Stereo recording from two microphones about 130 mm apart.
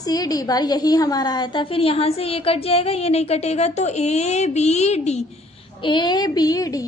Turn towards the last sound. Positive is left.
turn(degrees=30)  # may be behind; listen again after turning